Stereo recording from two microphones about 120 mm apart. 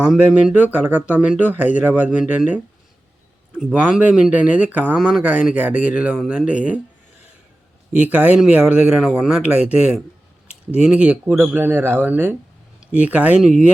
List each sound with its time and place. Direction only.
0.1 s speech: 5° right (ahead or behind)
4.9 s speech: 5° right (ahead or behind)
7.9 s speech: 10° right (ahead or behind)